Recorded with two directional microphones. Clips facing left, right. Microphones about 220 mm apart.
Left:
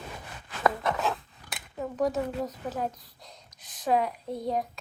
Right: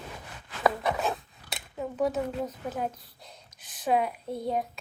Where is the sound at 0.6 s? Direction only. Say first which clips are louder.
Even; 10° right (ahead or behind).